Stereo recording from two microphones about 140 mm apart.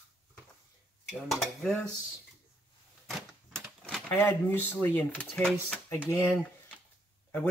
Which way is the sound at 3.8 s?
10° left (ahead or behind).